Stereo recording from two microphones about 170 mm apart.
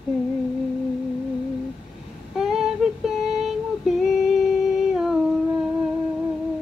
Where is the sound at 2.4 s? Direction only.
Centre (ahead or behind).